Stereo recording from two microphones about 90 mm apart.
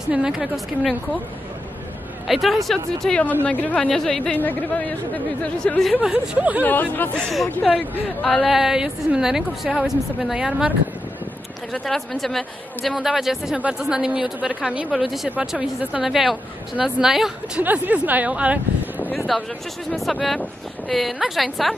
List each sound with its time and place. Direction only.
0.1 s a woman's voice: 5° right (ahead or behind)
2.2 s a woman's voice: centre (ahead or behind)
4.4 s speech: 20° left (ahead or behind)
5.9 s a woman's voice: 10° right (ahead or behind)
6.6 s speech: 20° left (ahead or behind)
7.2 s a woman's voice: centre (ahead or behind)
11.7 s a woman's voice: 5° left (ahead or behind); by 14.9 s 15° right (ahead or behind)
14.9 s a woman's voice: centre (ahead or behind)
15.2 s a woman's voice: 15° right (ahead or behind)
17.6 s a woman's voice: 15° right (ahead or behind)
19.1 s a woman's voice: centre (ahead or behind)